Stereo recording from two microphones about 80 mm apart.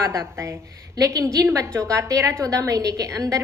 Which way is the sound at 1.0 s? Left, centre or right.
Right.